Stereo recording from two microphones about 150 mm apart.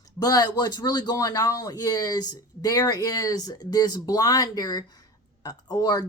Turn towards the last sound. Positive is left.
turn(degrees=25)  # may be behind; listen again after turning